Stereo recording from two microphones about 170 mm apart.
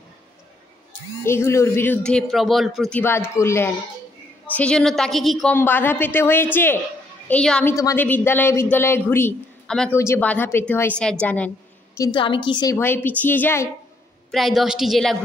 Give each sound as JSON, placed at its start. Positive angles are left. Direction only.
{"t": 1.2, "sound": "a woman's voice", "side_deg": 15}
{"t": 3.0, "sound": "a woman's voice", "side_deg": 15}
{"t": 5.6, "sound": "a woman's voice", "side_deg": 10}
{"t": 7.7, "sound": "a woman's voice", "side_deg": 15}
{"t": 9.9, "sound": "a woman's voice", "side_deg": 15}
{"t": 12.0, "sound": "a woman's voice", "side_deg": 30}
{"t": 12.7, "sound": "a woman's voice", "side_deg": 10}
{"t": 14.3, "sound": "a woman's voice", "side_deg": 0}